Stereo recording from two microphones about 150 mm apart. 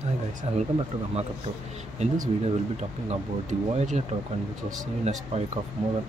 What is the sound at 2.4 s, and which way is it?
Speech, 45° right (ahead or behind).